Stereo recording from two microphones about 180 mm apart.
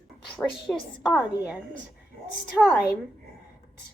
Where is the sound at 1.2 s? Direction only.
10° right (ahead or behind).